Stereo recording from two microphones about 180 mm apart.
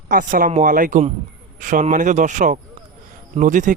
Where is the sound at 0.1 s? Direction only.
50° right (ahead or behind).